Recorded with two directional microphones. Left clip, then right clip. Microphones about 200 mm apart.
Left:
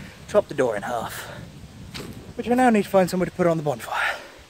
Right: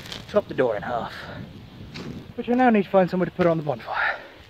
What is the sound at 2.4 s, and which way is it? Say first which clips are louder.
Speech: left 1 dB; 20° right (ahead or behind).